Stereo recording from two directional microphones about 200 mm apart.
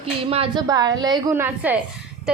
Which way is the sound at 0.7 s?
20° right (ahead or behind).